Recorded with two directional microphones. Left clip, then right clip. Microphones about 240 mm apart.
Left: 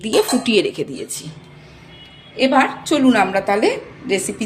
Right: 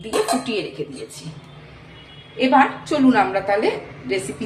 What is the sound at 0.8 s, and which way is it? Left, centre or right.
Speech, left.